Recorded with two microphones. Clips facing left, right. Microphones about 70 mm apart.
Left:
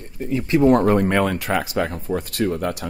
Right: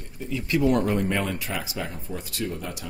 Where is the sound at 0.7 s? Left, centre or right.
Left.